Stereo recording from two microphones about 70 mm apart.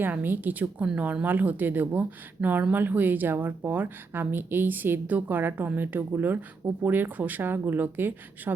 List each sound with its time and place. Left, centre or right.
0.0 s a woman's voice: right